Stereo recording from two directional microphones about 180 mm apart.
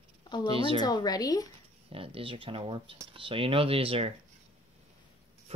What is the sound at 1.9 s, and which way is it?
Speech, 30° right (ahead or behind).